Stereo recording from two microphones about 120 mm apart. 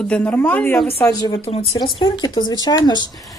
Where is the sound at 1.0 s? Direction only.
25° left (ahead or behind).